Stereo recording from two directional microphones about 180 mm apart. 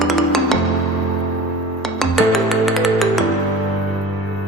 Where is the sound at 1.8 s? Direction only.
Centre (ahead or behind).